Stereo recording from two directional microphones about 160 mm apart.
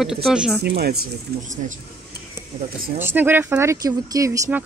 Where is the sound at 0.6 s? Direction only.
90° right.